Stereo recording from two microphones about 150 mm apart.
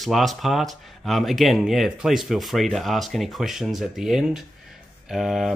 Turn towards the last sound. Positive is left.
turn(degrees=0)  # may be behind; listen again after turning